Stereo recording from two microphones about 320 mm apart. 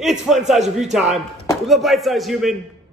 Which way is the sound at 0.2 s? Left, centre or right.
Centre.